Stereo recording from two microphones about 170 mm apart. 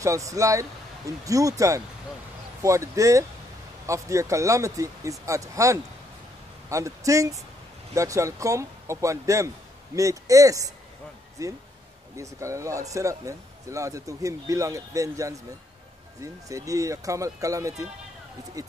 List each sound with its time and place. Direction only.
0.0 s speech: 20° right (ahead or behind)